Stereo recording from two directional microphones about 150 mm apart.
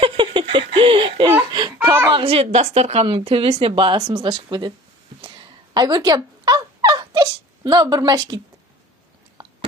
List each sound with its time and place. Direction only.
0.0 s laughter: 35° right (ahead or behind)
1.8 s a sound: 15° right (ahead or behind)
2.0 s a woman's voice: 35° right (ahead or behind)
5.2 s fowl: 30° right (ahead or behind)